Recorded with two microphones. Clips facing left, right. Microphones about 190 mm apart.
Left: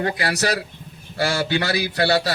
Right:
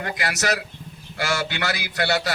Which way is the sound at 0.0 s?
30° left (ahead or behind).